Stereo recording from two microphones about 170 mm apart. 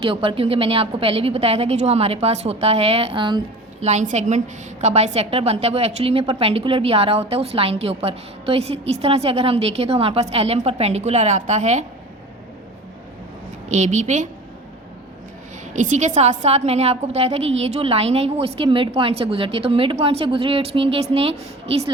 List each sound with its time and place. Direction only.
0.0 s a woman's voice: 30° right (ahead or behind)
3.8 s a woman's voice: 45° right (ahead or behind)
13.7 s a woman's voice: 45° right (ahead or behind)
15.7 s a woman's voice: 45° right (ahead or behind)